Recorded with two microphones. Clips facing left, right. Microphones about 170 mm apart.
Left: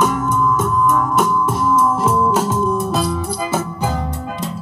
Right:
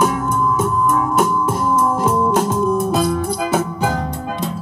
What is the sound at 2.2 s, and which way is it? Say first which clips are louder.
Music: right 1 dB; 5° left (ahead or behind).